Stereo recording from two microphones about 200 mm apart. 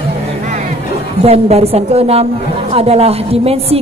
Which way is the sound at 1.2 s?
30° right (ahead or behind).